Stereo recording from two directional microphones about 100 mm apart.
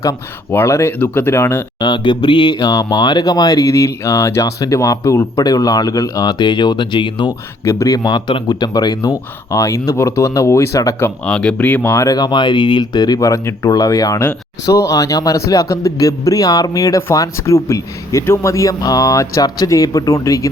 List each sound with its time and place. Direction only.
0.5 s speech: 25° left (ahead or behind)
1.8 s a man's voice: 50° left (ahead or behind)
7.6 s speech: 30° left (ahead or behind)
9.5 s a man's voice: 30° left (ahead or behind)
11.3 s speech: 10° left (ahead or behind)
12.0 s a man's voice: 40° left (ahead or behind)